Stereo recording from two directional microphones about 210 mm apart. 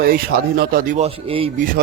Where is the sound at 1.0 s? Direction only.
25° right (ahead or behind).